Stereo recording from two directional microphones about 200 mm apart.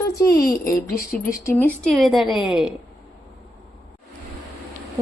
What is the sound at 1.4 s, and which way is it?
A woman's voice, 10° left (ahead or behind).